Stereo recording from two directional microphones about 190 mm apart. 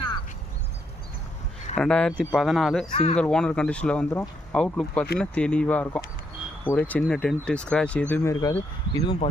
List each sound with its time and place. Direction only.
1.7 s speech: 5° left (ahead or behind)
2.9 s speech: 35° left (ahead or behind)
3.2 s speech: 5° left (ahead or behind)
9.0 s speech: 30° left (ahead or behind)